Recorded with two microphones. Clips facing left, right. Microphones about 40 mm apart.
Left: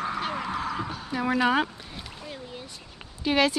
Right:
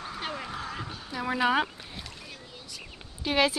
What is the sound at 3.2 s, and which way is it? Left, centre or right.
Speech, centre.